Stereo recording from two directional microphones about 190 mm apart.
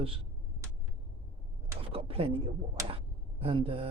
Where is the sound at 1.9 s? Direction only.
30° right (ahead or behind).